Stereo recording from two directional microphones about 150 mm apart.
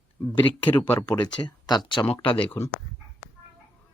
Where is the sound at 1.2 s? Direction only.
30° left (ahead or behind).